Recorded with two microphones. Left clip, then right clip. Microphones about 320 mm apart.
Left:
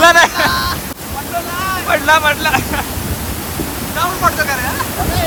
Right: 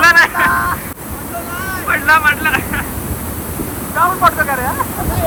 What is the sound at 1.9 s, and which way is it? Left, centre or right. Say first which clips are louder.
Speech: right 1 dB; centre.